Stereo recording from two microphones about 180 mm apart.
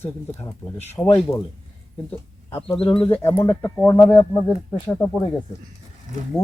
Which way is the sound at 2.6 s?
30° left (ahead or behind).